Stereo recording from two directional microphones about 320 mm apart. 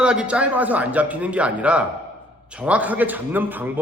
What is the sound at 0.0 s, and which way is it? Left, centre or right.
A man's voice, centre.